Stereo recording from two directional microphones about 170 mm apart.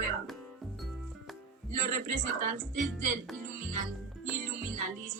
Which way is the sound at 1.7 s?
50° right (ahead or behind).